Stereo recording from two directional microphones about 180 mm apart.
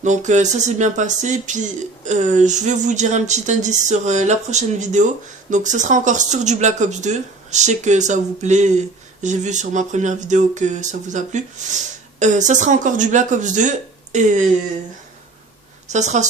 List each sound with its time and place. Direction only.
0.0 s speech: 40° right (ahead or behind)
15.9 s speech: 40° right (ahead or behind)